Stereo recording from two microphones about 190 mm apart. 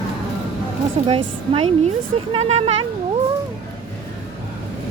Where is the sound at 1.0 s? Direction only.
30° right (ahead or behind).